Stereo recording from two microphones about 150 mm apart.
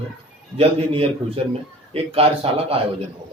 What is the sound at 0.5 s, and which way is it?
A man's voice, 40° right (ahead or behind).